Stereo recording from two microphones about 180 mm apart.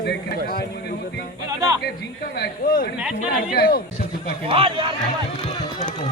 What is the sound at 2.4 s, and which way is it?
A man's voice, 55° left (ahead or behind).